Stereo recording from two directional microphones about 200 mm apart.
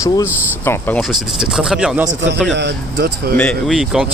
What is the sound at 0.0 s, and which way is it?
Speech, 15° left (ahead or behind).